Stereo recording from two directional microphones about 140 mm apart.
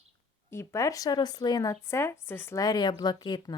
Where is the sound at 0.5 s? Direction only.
20° left (ahead or behind).